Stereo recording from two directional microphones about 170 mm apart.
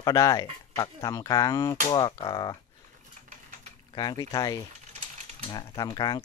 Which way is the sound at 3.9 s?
25° left (ahead or behind).